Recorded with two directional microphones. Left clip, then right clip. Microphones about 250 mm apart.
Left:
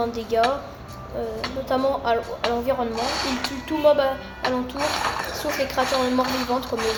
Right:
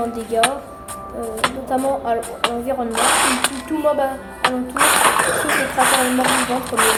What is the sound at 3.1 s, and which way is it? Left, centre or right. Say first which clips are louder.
Speech: right 9 dB; right.